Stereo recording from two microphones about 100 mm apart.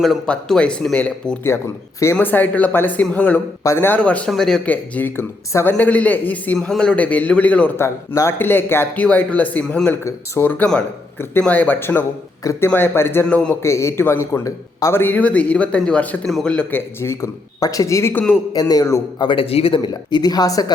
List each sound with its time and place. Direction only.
0.3 s a man's voice: 10° left (ahead or behind)
3.6 s a man's voice: 25° left (ahead or behind)
7.8 s a man's voice: 30° left (ahead or behind)
12.4 s speech: 35° left (ahead or behind)
12.6 s speech: 20° left (ahead or behind)
13.2 s a man's voice: 10° left (ahead or behind)
13.6 s a man's voice: 30° left (ahead or behind); by 16.6 s 10° left (ahead or behind)
16.7 s speech: 25° left (ahead or behind)
18.1 s a man's voice: 15° left (ahead or behind)
18.7 s speech: 35° left (ahead or behind)
19.3 s speech: 70° left (ahead or behind); by 20.7 s 40° left (ahead or behind)